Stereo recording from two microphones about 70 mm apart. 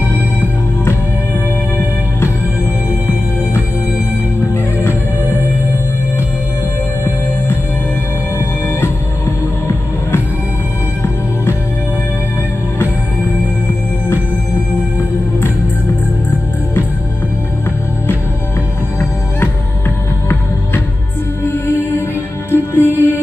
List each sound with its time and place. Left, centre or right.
2.9 s music: right
4.7 s music: left
21.5 s music: left